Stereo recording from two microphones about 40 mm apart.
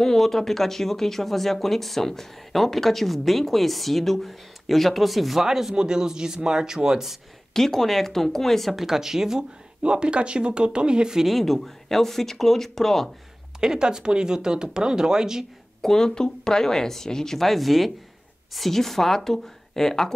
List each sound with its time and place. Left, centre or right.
0.0 s speech: centre
7.5 s speech: centre
8.7 s speech: centre
11.2 s speech: centre
13.6 s speech: centre
15.8 s speech: centre